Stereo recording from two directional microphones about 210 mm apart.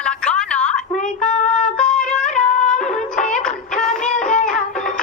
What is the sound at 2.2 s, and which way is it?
Music, 35° left (ahead or behind).